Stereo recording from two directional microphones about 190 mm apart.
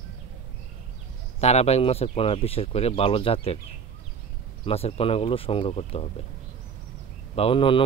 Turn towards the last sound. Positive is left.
turn(degrees=25)  # may be behind; listen again after turning